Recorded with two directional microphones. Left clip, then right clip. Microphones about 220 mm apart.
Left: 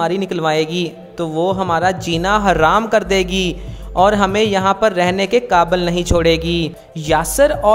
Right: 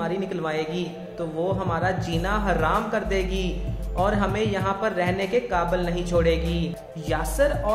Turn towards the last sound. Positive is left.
turn(degrees=45)  # may be behind; listen again after turning